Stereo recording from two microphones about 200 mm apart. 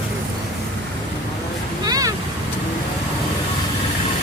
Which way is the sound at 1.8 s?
20° right (ahead or behind).